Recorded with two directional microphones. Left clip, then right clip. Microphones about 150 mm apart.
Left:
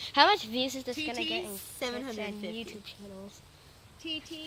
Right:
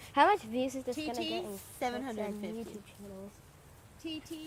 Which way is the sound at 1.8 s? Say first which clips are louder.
Even; 50° right (ahead or behind).